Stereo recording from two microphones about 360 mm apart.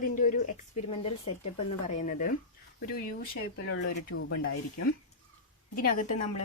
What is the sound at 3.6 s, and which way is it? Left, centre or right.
Speech, left.